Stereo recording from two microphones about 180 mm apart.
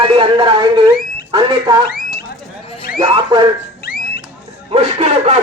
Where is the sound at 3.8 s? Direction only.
55° left (ahead or behind).